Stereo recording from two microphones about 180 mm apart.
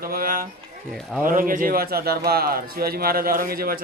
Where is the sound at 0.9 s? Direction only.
Centre (ahead or behind).